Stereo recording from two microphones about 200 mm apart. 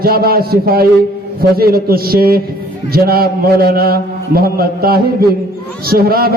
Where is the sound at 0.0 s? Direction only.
50° right (ahead or behind).